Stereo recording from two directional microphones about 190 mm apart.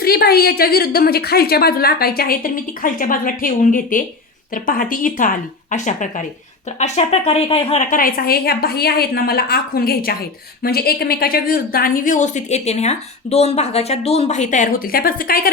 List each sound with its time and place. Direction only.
0.0 s speech: 55° left (ahead or behind)